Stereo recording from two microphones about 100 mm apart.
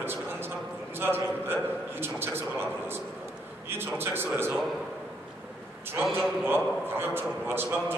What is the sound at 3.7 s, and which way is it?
Speech, 20° right (ahead or behind).